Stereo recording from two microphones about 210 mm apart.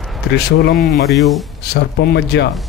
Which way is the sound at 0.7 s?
Centre (ahead or behind).